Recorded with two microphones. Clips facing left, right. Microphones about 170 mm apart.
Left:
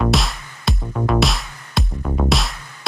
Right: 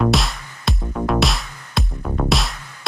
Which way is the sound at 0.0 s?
Centre (ahead or behind).